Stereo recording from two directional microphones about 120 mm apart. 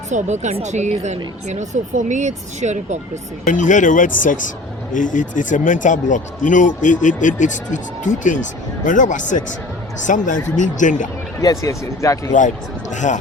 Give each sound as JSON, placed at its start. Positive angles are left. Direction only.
{"t": 0.1, "sound": "speech", "side_deg": -80}
{"t": 3.4, "sound": "speech", "side_deg": 90}
{"t": 11.3, "sound": "speech", "side_deg": 25}
{"t": 12.9, "sound": "speech", "side_deg": 90}